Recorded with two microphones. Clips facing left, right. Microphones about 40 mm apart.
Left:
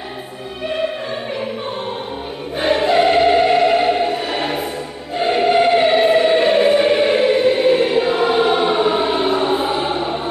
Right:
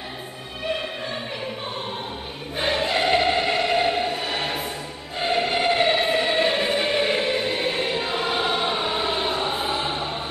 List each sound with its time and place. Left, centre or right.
2.5 s choir: centre